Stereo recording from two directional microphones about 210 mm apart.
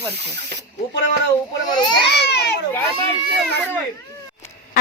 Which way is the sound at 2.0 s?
50° left (ahead or behind).